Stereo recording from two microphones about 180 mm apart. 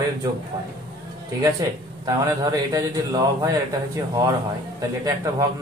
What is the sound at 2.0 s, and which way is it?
Speech, 20° right (ahead or behind).